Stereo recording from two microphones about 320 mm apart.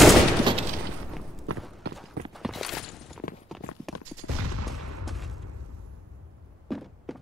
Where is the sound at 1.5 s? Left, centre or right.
Right.